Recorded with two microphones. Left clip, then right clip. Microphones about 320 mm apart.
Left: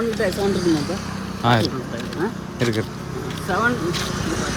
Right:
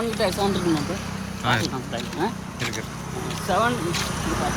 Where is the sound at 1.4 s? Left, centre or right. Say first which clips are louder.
Left 4 dB; centre.